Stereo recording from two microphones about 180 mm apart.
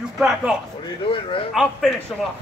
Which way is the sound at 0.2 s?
5° right (ahead or behind).